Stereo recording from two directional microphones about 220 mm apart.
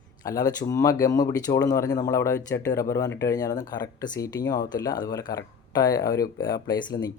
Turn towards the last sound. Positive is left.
turn(degrees=15)  # may be behind; listen again after turning